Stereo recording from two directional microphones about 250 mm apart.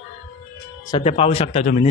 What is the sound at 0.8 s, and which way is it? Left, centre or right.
Speech, left.